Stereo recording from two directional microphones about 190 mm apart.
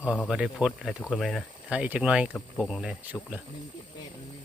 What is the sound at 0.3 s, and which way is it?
Speech, 5° right (ahead or behind).